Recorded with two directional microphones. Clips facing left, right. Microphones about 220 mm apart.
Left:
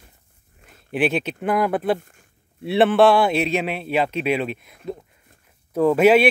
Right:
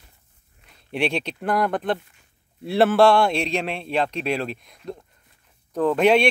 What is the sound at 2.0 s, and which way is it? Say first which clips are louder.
Speech: left 4 dB; 50° left (ahead or behind).